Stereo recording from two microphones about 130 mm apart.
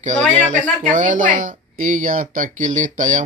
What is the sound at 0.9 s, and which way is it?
Speech, 80° right.